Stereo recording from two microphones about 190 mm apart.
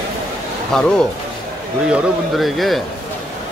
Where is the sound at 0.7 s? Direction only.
5° left (ahead or behind).